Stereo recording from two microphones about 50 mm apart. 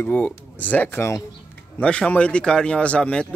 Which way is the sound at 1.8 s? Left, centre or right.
Left.